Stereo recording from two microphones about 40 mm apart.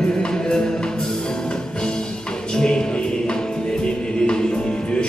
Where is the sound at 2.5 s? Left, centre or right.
Centre.